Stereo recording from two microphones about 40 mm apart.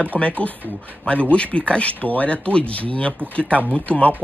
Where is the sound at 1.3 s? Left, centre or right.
Left.